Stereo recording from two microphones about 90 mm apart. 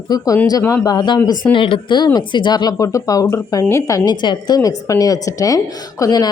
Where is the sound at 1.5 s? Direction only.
70° left (ahead or behind).